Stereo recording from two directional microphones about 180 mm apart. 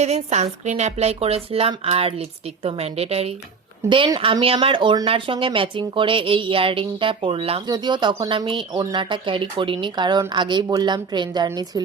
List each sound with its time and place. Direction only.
0.0 s speech: 40° right (ahead or behind); by 11.8 s 20° right (ahead or behind)